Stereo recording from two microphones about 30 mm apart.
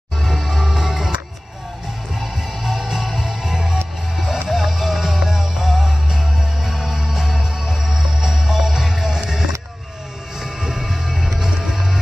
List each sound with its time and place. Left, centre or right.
0.2 s music: centre
2.1 s music: centre
3.3 s music: centre
10.8 s music: centre